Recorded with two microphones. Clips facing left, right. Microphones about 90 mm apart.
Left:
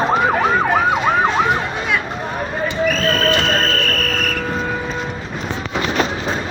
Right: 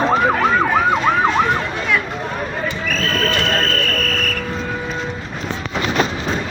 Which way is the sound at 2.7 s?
15° left (ahead or behind).